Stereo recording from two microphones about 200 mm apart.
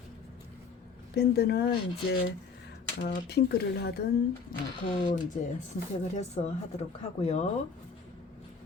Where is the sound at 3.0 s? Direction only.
55° left (ahead or behind).